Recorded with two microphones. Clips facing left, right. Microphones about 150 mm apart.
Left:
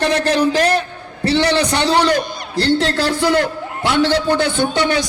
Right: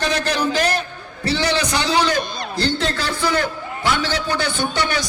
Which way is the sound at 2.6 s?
30° left (ahead or behind).